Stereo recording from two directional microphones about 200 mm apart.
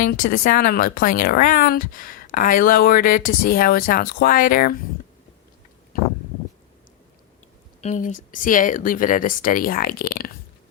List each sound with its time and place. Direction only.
0.0 s speech: 45° left (ahead or behind)
5.9 s a sound: 45° left (ahead or behind)
7.8 s speech: 35° left (ahead or behind)